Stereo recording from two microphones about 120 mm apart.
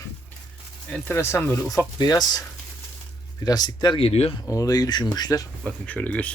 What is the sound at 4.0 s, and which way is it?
Speech, 55° left (ahead or behind).